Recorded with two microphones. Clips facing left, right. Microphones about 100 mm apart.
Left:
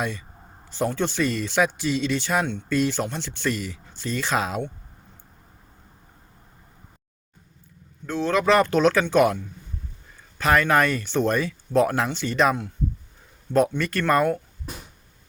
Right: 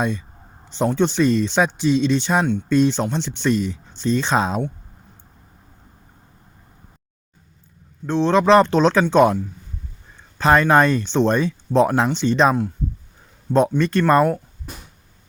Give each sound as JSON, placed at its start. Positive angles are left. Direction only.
{"t": 0.7, "sound": "speech", "side_deg": -20}
{"t": 8.0, "sound": "speech", "side_deg": -30}